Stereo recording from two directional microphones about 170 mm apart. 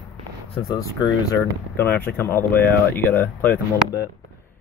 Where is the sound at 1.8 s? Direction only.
15° left (ahead or behind).